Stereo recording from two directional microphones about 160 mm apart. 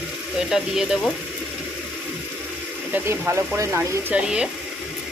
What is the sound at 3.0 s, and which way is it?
Speech, 15° right (ahead or behind).